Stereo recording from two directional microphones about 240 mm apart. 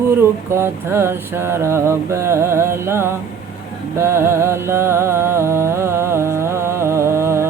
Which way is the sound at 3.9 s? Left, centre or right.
Centre.